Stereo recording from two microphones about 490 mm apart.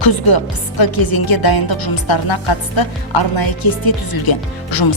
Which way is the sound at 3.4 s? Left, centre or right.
Left.